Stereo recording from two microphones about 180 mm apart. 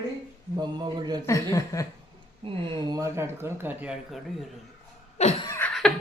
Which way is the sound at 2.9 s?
15° right (ahead or behind).